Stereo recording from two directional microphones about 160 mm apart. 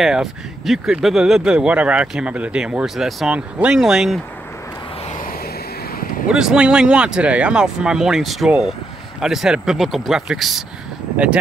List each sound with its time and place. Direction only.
0.0 s speech: centre (ahead or behind)
5.0 s vehicle: 55° left (ahead or behind)
6.2 s speech: 5° right (ahead or behind)